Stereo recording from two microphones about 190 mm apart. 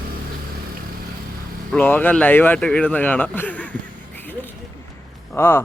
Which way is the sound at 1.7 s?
10° left (ahead or behind).